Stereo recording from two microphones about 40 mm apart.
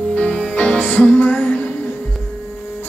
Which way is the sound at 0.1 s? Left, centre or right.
Left.